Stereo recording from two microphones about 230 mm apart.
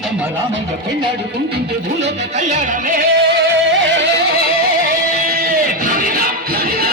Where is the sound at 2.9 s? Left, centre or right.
Right.